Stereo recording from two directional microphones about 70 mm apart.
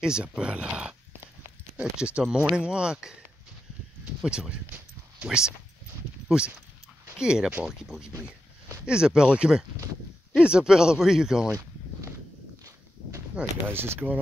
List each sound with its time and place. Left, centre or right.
0.0 s speech: centre
4.2 s speech: centre
13.7 s speech: right